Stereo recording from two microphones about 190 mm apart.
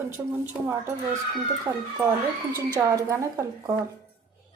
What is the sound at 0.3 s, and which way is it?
Speech, 10° right (ahead or behind).